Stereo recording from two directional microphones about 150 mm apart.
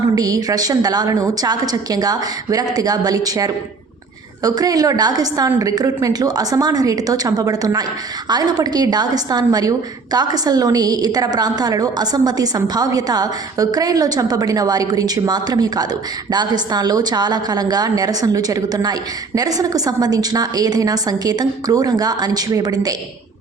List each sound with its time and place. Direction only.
0.2 s a woman's voice: 25° right (ahead or behind)